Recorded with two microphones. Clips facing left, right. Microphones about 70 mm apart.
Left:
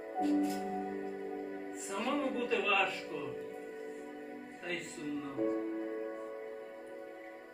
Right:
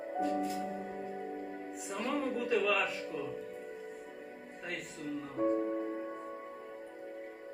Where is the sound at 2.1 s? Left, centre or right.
Centre.